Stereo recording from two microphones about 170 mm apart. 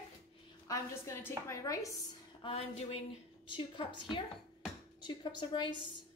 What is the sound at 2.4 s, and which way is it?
A woman's voice, 35° left (ahead or behind).